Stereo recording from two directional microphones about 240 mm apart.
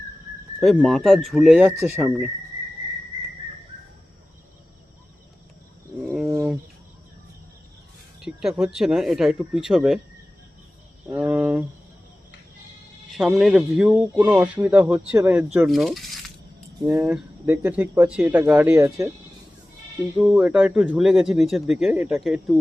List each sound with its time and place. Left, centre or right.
0.6 s speech: centre
6.1 s wild animals: centre
8.2 s speech: centre
11.1 s a sound: centre
13.1 s speech: centre
15.5 s coin: centre
16.8 s speech: centre
20.1 s speech: centre